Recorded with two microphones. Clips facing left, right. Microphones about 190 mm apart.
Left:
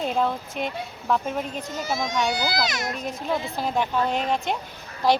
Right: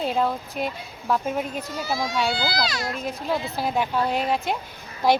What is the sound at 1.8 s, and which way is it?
Speech, 20° left (ahead or behind).